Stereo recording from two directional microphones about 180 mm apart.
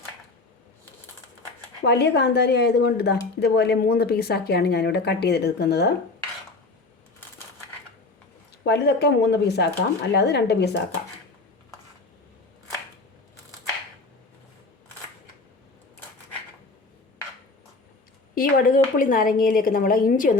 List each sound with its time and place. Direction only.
1.8 s speech: 65° left (ahead or behind)
8.6 s speech: 65° left (ahead or behind)
18.3 s a woman's voice: 50° left (ahead or behind)